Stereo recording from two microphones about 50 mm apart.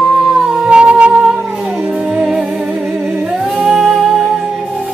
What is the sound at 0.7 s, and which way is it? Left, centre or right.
Humming, right.